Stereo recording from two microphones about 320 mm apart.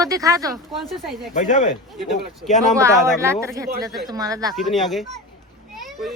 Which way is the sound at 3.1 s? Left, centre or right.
Centre.